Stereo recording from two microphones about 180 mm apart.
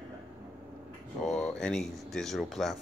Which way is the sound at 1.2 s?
5° left (ahead or behind).